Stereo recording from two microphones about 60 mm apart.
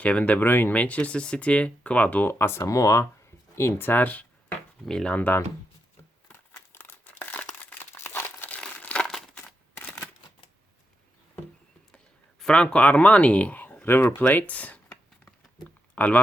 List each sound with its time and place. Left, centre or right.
0.0 s speech: left
0.3 s speech: left
2.2 s speech: left
2.6 s speech: left
3.5 s speech: left
6.7 s crumpling: left
7.9 s crumpling: left
8.4 s crumpling: left
9.0 s crumpling: centre
12.4 s a sound: centre
12.6 s speech: left
16.0 s speech: left